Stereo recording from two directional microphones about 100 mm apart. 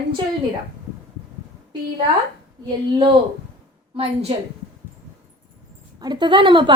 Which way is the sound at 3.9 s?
80° right.